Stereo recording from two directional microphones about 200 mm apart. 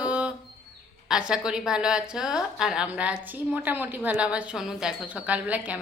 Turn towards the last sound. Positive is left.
turn(degrees=-5)  # may be behind; listen again after turning